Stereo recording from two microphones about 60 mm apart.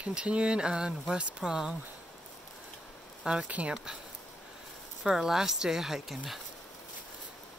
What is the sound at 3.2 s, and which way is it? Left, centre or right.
Speech, centre.